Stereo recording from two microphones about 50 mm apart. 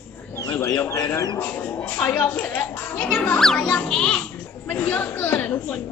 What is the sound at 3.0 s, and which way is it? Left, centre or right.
Music, left.